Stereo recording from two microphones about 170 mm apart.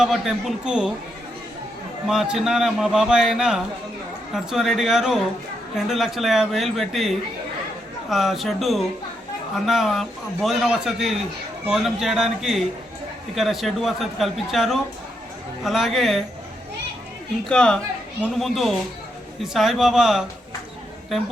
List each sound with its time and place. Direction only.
0.0 s a man's voice: centre (ahead or behind)
2.0 s a man's voice: 5° right (ahead or behind)
8.1 s a man's voice: centre (ahead or behind)
17.5 s a man's voice: 5° left (ahead or behind)